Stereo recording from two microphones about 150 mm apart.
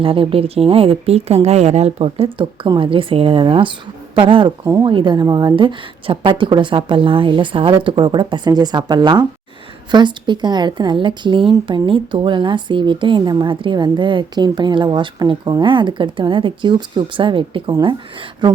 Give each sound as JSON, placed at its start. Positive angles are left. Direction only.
{"t": 0.0, "sound": "a woman's voice", "side_deg": -35}